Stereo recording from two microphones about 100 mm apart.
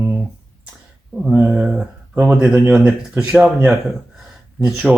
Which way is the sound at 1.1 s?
10° right (ahead or behind).